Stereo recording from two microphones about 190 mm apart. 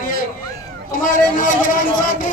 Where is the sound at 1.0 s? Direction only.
45° left (ahead or behind).